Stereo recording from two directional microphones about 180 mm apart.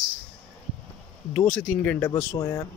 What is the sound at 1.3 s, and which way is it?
Speech, 10° left (ahead or behind).